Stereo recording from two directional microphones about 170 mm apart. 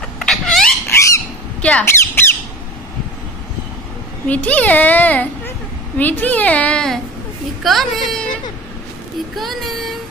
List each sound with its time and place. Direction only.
0.2 s a sound: 5° left (ahead or behind)
0.8 s bird: 15° left (ahead or behind)
1.6 s squawk: 5° left (ahead or behind)
4.3 s a child's voice: 10° left (ahead or behind)
9.3 s speech: centre (ahead or behind)